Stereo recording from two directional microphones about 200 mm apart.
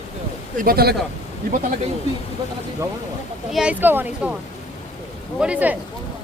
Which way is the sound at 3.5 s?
5° right (ahead or behind).